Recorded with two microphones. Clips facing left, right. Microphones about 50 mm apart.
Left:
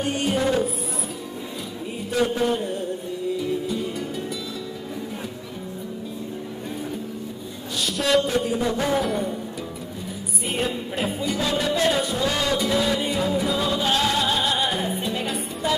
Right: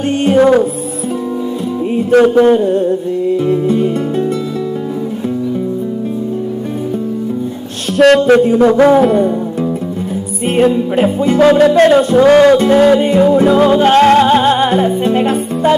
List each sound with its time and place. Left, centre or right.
0.4 s music: right
2.4 s music: right
8.0 s a man's voice: right
8.5 s music: right
10.5 s music: right
11.3 s music: right